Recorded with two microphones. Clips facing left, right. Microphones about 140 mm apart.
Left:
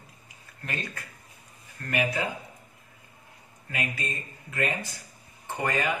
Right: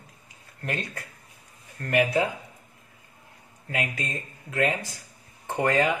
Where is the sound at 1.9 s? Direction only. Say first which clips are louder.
Right 6 dB; 70° right (ahead or behind).